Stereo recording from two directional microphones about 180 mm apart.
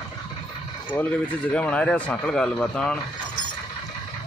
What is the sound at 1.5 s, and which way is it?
Speech, 5° left (ahead or behind).